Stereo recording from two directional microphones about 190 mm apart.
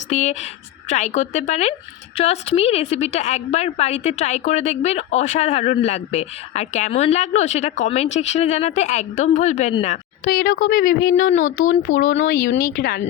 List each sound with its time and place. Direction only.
0.1 s a woman's voice: 40° left (ahead or behind)
10.2 s speech: 55° left (ahead or behind)
11.6 s speech: 85° left
12.2 s speech: 50° left (ahead or behind)